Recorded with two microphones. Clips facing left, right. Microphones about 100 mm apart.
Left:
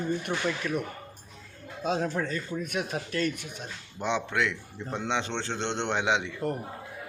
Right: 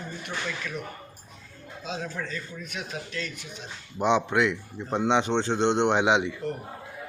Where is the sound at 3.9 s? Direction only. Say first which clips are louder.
Right 6 dB; 20° right (ahead or behind).